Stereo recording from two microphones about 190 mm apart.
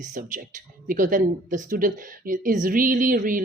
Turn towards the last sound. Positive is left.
turn(degrees=-45)  # may be behind; listen again after turning